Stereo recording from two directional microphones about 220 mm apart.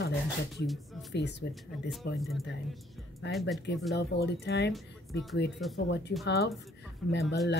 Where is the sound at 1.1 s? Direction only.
50° left (ahead or behind).